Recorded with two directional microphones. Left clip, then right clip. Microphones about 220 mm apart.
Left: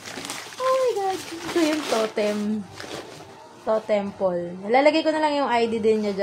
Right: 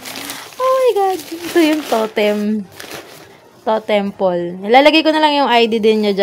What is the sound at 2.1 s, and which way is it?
Speech, 40° right (ahead or behind).